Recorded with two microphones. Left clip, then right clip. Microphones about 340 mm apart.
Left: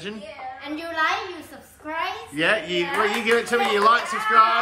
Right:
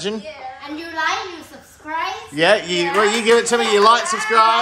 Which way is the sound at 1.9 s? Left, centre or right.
Centre.